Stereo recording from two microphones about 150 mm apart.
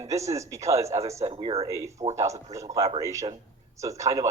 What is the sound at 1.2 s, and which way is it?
Speech, 40° right (ahead or behind).